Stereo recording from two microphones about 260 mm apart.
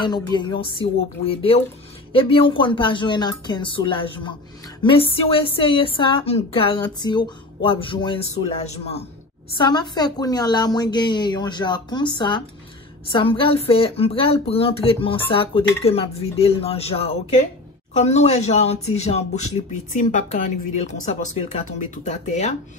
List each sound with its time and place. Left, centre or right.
0.0 s a woman's voice: centre